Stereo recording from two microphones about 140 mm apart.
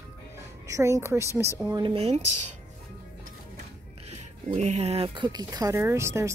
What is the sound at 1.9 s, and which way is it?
Speech, 50° right (ahead or behind).